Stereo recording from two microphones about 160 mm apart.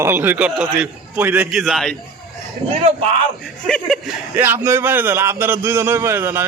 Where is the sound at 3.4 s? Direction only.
5° left (ahead or behind).